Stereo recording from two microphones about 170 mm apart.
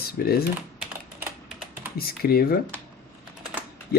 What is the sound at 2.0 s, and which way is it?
Speech, 65° left (ahead or behind).